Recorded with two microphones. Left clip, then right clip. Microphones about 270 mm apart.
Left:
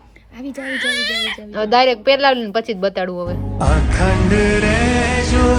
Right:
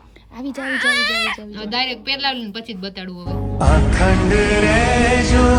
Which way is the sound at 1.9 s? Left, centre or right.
Centre.